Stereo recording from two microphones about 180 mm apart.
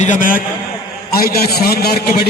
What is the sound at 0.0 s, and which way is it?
A man's voice, 45° left (ahead or behind).